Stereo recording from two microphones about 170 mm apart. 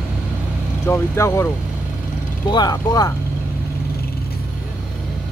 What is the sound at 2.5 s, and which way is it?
Speech, 25° left (ahead or behind).